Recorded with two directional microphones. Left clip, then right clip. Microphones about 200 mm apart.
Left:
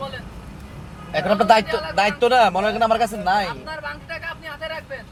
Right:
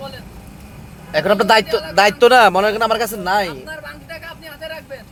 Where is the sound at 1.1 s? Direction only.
45° right (ahead or behind).